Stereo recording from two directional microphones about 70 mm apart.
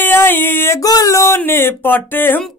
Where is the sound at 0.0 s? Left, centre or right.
Left.